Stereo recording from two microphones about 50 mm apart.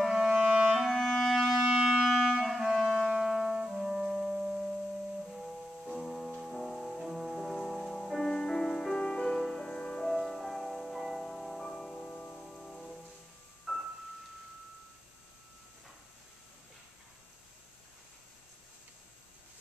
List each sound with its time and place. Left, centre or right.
0.1 s clarinet: centre
0.9 s clarinet: centre
1.6 s music: centre
1.9 s music: centre
2.6 s clarinet: centre
3.2 s music: centre
3.5 s brass instrument: centre
5.9 s music: centre
12.4 s music: centre
13.7 s music: centre